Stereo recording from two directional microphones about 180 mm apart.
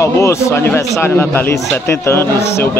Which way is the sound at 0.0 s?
15° left (ahead or behind).